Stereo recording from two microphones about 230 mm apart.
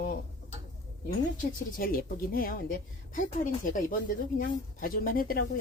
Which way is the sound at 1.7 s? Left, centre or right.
Left.